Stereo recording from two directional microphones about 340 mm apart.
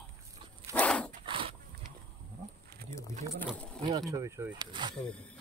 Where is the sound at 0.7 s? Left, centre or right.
Centre.